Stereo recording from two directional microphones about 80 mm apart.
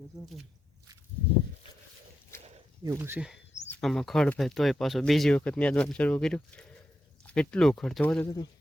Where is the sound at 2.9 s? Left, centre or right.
Right.